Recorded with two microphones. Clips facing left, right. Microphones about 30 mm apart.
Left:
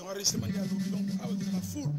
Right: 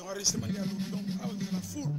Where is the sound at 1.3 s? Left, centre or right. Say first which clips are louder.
Left 2 dB; centre.